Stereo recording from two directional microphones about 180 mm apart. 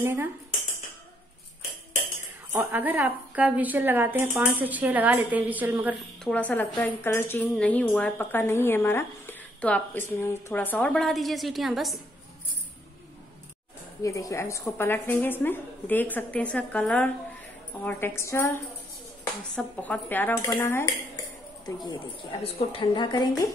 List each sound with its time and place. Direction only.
0.0 s a woman's voice: 15° right (ahead or behind)
2.5 s a woman's voice: 10° right (ahead or behind)
5.9 s a woman's voice: 5° left (ahead or behind)
14.0 s a woman's voice: 15° left (ahead or behind)
22.4 s a woman's voice: 30° left (ahead or behind)